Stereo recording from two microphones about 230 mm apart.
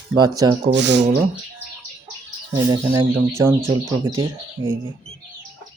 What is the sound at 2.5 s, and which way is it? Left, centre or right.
Speech, centre.